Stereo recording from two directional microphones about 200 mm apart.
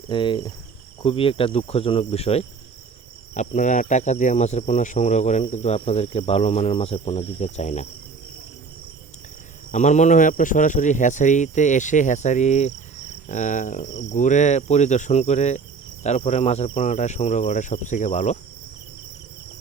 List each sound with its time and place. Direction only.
0.1 s cricket: 25° left (ahead or behind)
9.7 s cricket: 35° left (ahead or behind)